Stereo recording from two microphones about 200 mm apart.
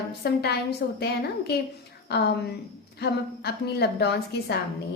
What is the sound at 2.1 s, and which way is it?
A woman's voice, 55° left (ahead or behind).